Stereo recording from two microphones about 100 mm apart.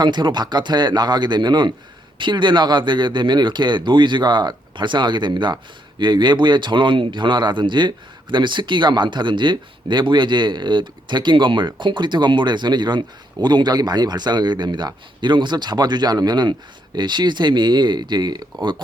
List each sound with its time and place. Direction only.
0.0 s speech: 50° right (ahead or behind)